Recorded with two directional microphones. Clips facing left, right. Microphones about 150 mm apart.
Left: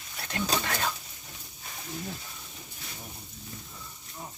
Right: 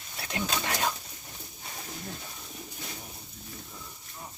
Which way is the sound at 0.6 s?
15° right (ahead or behind).